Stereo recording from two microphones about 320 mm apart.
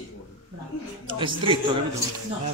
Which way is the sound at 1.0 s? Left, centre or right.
Centre.